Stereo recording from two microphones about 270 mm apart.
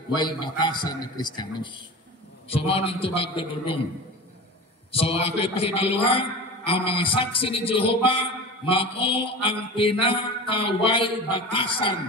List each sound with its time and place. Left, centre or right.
0.1 s a man's voice: centre
4.9 s a man's voice: left